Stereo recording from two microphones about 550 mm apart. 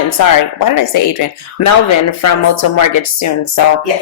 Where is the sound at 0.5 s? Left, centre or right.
Left.